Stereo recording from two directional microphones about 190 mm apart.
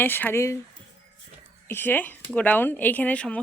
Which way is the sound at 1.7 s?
10° left (ahead or behind).